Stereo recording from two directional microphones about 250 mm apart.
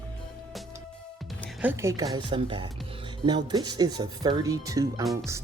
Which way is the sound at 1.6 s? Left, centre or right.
Centre.